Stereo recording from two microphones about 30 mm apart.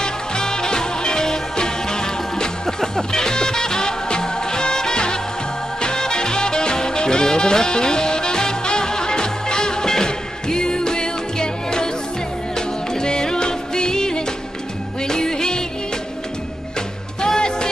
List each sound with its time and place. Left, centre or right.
0.0 s music: left
17.2 s music: left